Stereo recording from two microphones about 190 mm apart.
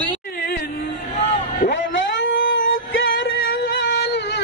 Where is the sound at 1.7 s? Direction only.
75° left (ahead or behind).